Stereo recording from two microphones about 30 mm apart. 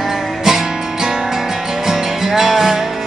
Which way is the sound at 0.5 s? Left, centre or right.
Centre.